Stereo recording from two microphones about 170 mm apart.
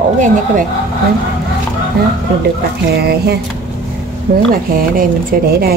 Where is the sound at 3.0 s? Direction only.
65° right (ahead or behind).